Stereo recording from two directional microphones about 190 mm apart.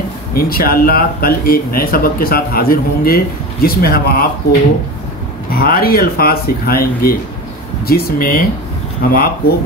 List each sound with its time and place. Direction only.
0.3 s speech: 50° left (ahead or behind)
5.5 s speech: 50° left (ahead or behind)